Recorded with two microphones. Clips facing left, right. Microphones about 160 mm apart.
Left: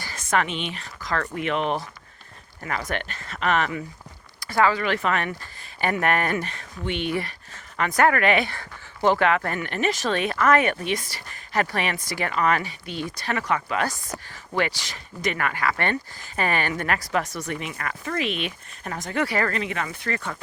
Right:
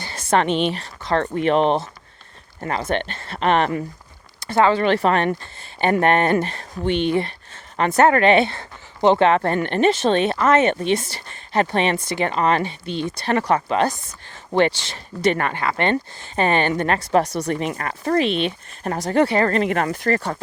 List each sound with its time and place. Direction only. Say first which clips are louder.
0.0 s speech: right 5 dB; 30° right (ahead or behind)
4.4 s speech: right 5 dB; 25° right (ahead or behind)
19.5 s speech: right 9 dB; 50° right (ahead or behind)